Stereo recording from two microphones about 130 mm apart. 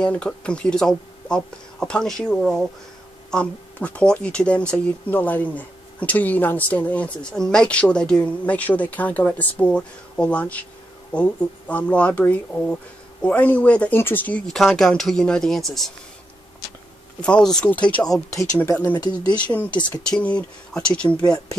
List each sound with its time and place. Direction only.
0.0 s speech: 10° left (ahead or behind)
17.2 s speech: 5° left (ahead or behind)
18.7 s speech: 20° left (ahead or behind)